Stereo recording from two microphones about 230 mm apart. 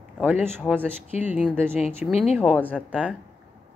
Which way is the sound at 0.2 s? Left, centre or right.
Centre.